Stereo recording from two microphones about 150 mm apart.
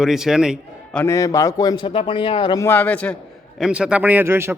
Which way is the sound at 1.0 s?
20° left (ahead or behind).